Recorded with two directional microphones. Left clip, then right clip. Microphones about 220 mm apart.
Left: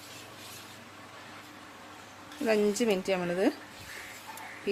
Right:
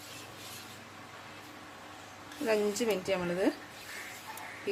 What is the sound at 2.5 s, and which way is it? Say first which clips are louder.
Speech: left 3 dB; 40° left (ahead or behind).